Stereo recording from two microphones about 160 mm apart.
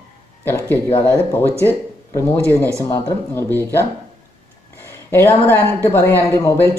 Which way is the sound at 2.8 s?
15° left (ahead or behind).